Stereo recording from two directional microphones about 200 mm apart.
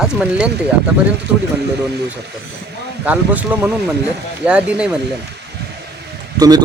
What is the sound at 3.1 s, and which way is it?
Speech, 10° right (ahead or behind).